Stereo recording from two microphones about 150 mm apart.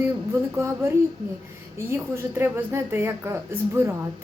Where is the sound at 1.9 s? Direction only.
15° right (ahead or behind).